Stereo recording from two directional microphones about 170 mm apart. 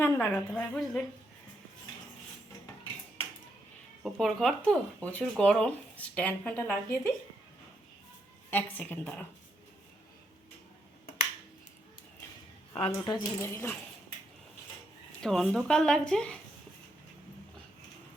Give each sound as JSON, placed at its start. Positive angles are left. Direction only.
{"t": 0.0, "sound": "speech", "side_deg": 10}
{"t": 4.0, "sound": "speech", "side_deg": 0}
{"t": 8.4, "sound": "speech", "side_deg": 10}
{"t": 12.7, "sound": "speech", "side_deg": 30}
{"t": 13.4, "sound": "speech", "side_deg": 15}
{"t": 15.2, "sound": "speech", "side_deg": 0}